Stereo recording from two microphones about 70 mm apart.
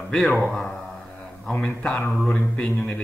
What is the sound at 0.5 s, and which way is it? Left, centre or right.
Speech, centre.